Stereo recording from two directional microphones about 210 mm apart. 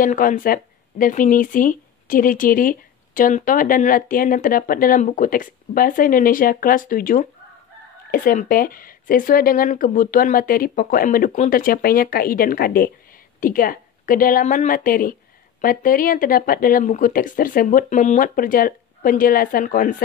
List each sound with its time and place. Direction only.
0.0 s speech: 40° left (ahead or behind)